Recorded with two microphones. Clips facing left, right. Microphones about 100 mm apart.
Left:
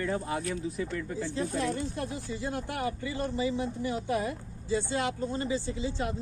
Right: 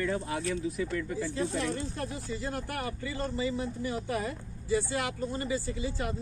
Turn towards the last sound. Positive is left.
turn(degrees=25)  # may be behind; listen again after turning